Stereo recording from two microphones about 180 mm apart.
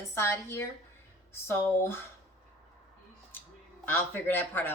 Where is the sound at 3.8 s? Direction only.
10° left (ahead or behind).